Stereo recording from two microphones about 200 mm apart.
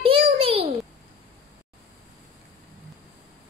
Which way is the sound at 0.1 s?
30° right (ahead or behind).